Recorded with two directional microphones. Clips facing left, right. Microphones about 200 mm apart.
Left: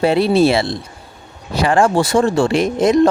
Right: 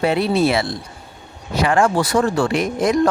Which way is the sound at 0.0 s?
30° left (ahead or behind).